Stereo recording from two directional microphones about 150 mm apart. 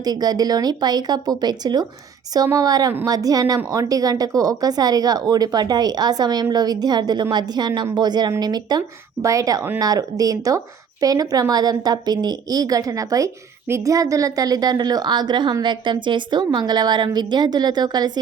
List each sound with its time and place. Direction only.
0.0 s a woman's voice: 25° right (ahead or behind)